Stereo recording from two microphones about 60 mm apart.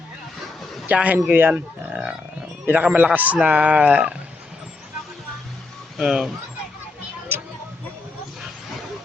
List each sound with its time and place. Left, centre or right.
0.9 s speech: right
6.0 s speech: centre